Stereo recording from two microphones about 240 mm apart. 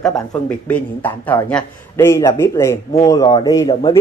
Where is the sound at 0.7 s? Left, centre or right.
Centre.